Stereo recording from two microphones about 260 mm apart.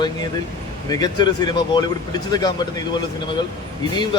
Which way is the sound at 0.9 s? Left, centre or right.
Centre.